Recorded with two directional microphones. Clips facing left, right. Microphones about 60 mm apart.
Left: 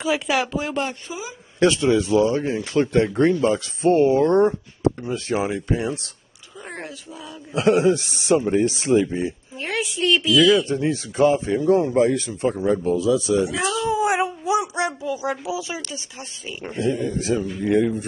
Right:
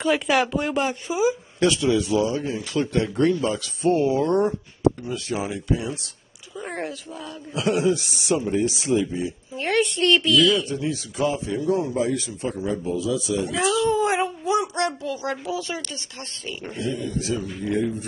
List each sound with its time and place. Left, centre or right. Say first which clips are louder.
0.0 s speech: right 1 dB; centre
1.6 s a man's voice: left 3 dB; left
6.6 s speech: right 4 dB; centre
7.5 s a man's voice: left 4 dB; left
9.6 s speech: right 4 dB; centre
10.7 s a man's voice: left 4 dB; left
13.8 s speech: left 1 dB; centre
16.7 s a man's voice: left 6 dB; left
17.6 s a man's voice: left 5 dB; left